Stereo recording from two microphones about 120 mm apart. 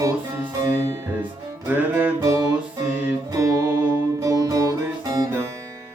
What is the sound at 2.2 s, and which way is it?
Music, 35° right (ahead or behind).